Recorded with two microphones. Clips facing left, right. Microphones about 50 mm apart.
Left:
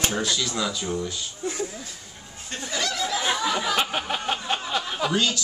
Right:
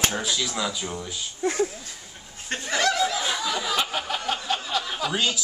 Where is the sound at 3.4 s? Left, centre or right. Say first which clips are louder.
Left 2 dB; left.